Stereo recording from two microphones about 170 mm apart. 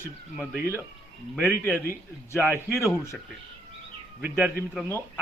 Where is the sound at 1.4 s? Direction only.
10° left (ahead or behind).